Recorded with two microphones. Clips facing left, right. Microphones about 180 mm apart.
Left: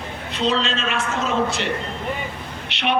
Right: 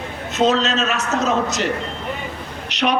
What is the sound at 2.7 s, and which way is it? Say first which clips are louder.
Vehicle: right 4 dB; 40° right (ahead or behind).